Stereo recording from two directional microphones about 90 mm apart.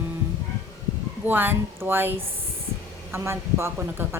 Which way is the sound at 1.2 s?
20° right (ahead or behind).